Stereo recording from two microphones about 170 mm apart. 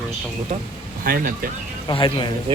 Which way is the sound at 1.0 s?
55° right (ahead or behind).